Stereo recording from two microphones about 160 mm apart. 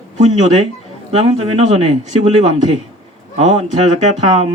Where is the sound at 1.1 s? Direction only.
40° right (ahead or behind).